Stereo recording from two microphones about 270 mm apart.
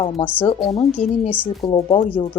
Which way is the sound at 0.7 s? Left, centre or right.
Left.